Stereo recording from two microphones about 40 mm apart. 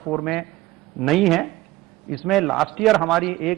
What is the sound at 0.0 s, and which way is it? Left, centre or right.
A man's voice, centre.